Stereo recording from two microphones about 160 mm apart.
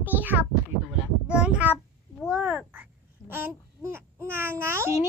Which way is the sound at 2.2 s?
5° right (ahead or behind).